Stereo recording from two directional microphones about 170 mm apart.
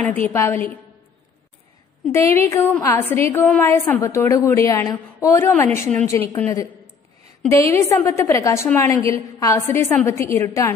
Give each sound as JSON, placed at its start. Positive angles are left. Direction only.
{"t": 0.1, "sound": "a woman's voice", "side_deg": 15}
{"t": 2.4, "sound": "a woman's voice", "side_deg": 15}